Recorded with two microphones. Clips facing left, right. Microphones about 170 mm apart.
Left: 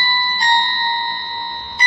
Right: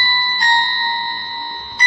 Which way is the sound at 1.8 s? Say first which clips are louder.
Even; 20° left (ahead or behind).